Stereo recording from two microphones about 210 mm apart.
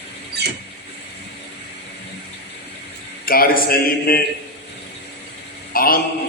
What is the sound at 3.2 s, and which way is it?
A man's voice, 45° left (ahead or behind).